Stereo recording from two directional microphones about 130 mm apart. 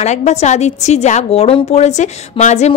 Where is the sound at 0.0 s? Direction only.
60° left (ahead or behind).